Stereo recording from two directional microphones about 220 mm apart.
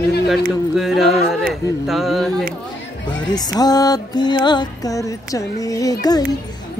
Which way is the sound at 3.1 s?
20° left (ahead or behind).